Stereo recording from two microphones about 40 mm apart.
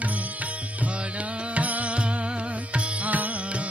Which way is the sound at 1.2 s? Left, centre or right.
Right.